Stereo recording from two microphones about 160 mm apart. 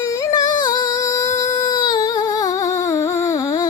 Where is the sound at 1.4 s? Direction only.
25° left (ahead or behind).